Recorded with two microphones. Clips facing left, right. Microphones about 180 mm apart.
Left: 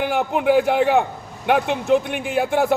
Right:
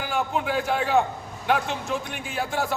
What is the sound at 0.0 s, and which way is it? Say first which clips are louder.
A man's voice: left 7 dB; 60° left (ahead or behind).